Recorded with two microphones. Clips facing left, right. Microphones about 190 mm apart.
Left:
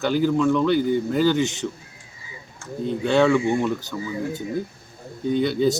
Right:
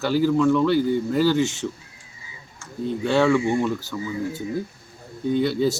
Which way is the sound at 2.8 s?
5° right (ahead or behind).